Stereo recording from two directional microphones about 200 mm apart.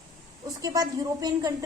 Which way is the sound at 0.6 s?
20° right (ahead or behind).